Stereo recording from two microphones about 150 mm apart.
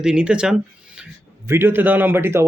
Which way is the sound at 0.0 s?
5° right (ahead or behind).